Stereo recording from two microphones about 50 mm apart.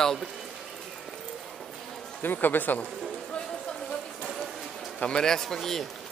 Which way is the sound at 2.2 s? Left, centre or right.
Left.